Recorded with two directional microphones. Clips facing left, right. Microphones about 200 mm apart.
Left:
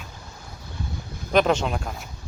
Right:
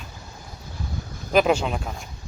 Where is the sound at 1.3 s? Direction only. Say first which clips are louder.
Right 1 dB; 5° right (ahead or behind).